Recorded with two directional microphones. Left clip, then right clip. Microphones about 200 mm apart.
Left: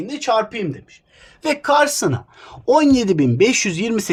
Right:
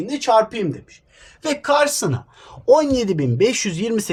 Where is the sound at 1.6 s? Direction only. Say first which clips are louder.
Left 1 dB; 30° left (ahead or behind).